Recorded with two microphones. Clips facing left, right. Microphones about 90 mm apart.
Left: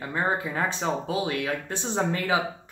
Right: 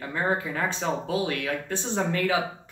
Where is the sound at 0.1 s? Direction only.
20° left (ahead or behind).